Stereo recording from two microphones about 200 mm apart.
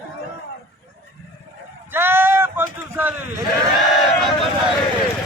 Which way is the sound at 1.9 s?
10° right (ahead or behind).